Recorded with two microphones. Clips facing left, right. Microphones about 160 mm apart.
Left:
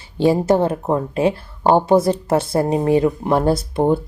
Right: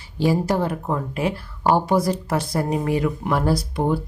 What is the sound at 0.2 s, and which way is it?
Speech, 25° left (ahead or behind).